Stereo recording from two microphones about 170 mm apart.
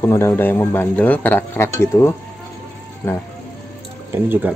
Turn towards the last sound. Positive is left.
turn(degrees=-10)  # may be behind; listen again after turning